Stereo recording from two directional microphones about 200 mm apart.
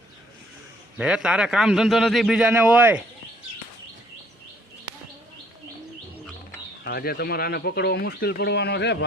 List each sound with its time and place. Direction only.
0.9 s a man's voice: 5° right (ahead or behind)
6.8 s speech: 50° left (ahead or behind)